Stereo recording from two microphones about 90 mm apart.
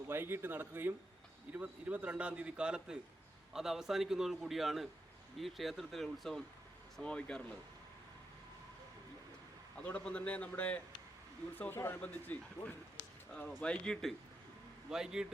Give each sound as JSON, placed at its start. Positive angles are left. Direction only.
{"t": 0.1, "sound": "a man's voice", "side_deg": -25}
{"t": 9.8, "sound": "a man's voice", "side_deg": 15}
{"t": 14.8, "sound": "a man's voice", "side_deg": -5}